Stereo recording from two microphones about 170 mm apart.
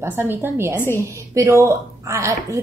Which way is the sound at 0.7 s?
15° left (ahead or behind).